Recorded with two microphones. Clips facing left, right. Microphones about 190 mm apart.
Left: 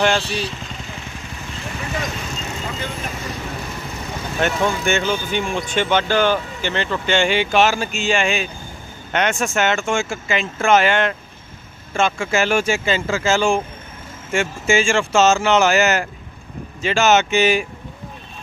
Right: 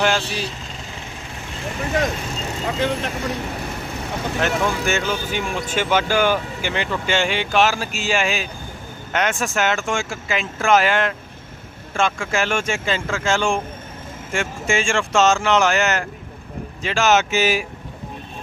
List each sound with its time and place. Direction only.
0.0 s speech: 5° right (ahead or behind)
2.7 s speech: 80° right
4.4 s speech: centre (ahead or behind)